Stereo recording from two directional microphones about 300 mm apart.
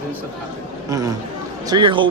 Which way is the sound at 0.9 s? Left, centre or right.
Centre.